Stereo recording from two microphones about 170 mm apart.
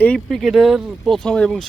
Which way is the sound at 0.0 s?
5° left (ahead or behind).